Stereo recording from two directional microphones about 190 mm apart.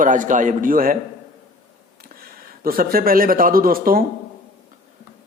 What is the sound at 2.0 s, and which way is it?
Speech, 50° right (ahead or behind).